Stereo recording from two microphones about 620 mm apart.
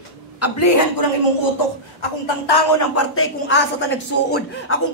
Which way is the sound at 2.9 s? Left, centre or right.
Centre.